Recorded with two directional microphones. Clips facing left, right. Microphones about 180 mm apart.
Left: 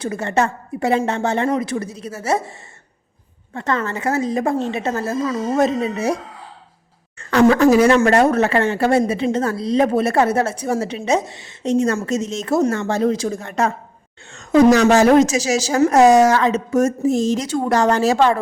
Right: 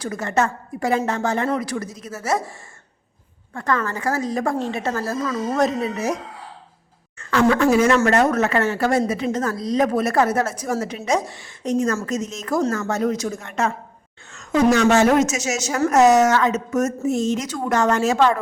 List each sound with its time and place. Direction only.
0.0 s a woman's voice: 30° left (ahead or behind)
7.2 s a woman's voice: 30° left (ahead or behind)